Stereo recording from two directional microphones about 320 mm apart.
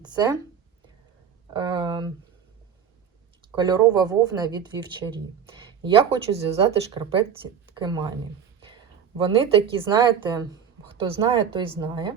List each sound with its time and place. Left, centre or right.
0.0 s speech: centre
1.5 s speech: centre
3.5 s speech: centre
9.1 s speech: centre